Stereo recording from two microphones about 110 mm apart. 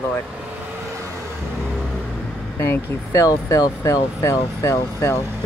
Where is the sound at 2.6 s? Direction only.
25° left (ahead or behind).